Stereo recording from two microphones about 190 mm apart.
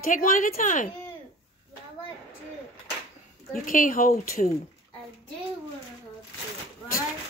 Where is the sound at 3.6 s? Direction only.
45° left (ahead or behind).